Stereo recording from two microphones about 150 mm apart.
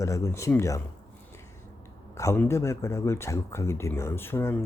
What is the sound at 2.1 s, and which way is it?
Speech, 20° left (ahead or behind).